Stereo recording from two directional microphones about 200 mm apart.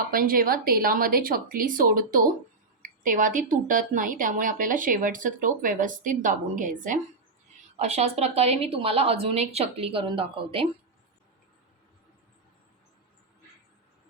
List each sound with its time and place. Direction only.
0.1 s a woman's voice: 45° right (ahead or behind); by 10.7 s 25° right (ahead or behind)